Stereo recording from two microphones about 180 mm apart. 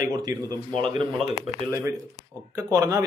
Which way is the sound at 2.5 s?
20° right (ahead or behind).